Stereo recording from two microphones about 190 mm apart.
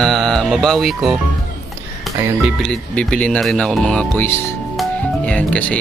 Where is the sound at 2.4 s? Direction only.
Centre (ahead or behind).